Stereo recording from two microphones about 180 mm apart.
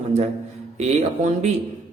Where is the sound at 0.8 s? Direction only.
40° right (ahead or behind).